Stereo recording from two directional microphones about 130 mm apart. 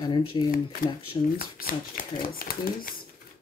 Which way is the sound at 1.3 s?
90° left.